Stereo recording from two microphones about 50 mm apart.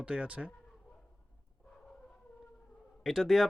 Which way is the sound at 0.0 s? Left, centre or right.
Right.